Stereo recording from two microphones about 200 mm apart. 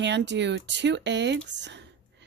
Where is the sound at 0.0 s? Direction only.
60° right (ahead or behind).